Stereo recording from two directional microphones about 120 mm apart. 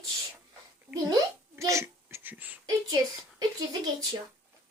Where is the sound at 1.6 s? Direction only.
25° right (ahead or behind).